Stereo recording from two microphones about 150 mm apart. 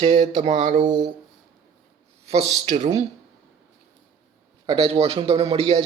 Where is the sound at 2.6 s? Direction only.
50° right (ahead or behind).